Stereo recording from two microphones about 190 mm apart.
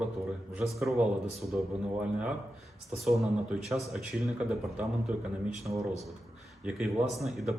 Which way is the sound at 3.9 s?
Centre (ahead or behind).